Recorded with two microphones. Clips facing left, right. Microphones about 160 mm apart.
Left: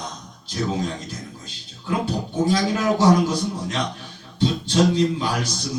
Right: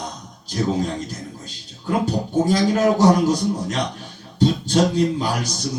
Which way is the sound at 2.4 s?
40° right (ahead or behind).